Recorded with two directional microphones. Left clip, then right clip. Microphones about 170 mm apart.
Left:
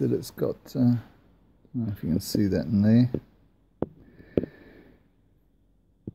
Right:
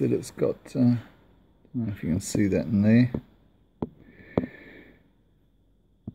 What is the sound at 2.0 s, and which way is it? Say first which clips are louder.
Speech: even; centre (ahead or behind).